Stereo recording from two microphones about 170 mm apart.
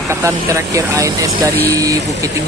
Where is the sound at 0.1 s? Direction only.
15° right (ahead or behind).